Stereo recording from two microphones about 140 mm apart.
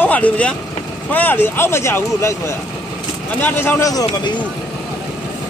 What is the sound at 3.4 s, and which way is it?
Speech, 15° left (ahead or behind).